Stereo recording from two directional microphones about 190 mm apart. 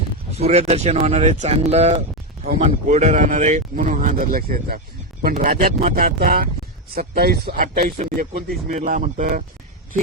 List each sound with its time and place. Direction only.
0.3 s speech: 35° right (ahead or behind)